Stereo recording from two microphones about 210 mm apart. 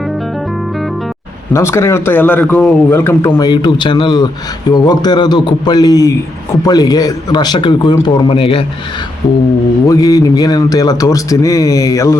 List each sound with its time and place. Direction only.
1.5 s a man's voice: 15° left (ahead or behind)
9.8 s a man's voice: 15° left (ahead or behind)